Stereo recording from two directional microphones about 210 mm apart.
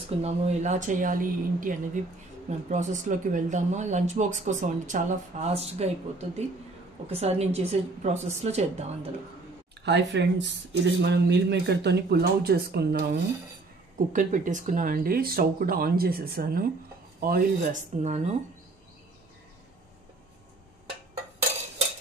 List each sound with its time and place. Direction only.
0.2 s speech: 35° right (ahead or behind)
9.8 s speech: 55° right (ahead or behind)
13.9 s speech: 40° right (ahead or behind)